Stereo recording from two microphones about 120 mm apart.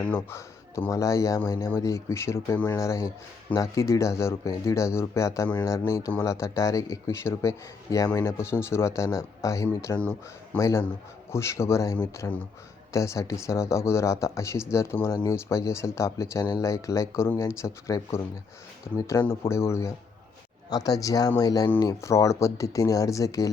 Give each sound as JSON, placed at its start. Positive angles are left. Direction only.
{"t": 0.1, "sound": "a man's voice", "side_deg": 20}
{"t": 10.0, "sound": "speech", "side_deg": 15}
{"t": 10.6, "sound": "a man's voice", "side_deg": 25}